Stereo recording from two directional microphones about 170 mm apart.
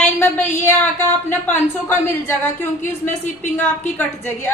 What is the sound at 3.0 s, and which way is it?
Speech, 45° left (ahead or behind).